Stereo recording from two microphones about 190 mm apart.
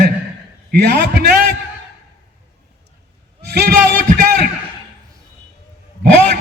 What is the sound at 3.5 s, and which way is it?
Speech, 60° right (ahead or behind).